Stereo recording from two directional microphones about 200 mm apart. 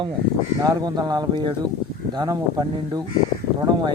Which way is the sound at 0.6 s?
20° right (ahead or behind).